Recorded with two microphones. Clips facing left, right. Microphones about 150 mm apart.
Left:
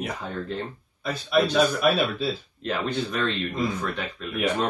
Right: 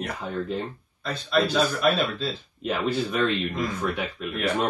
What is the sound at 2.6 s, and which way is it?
Speech, 5° right (ahead or behind).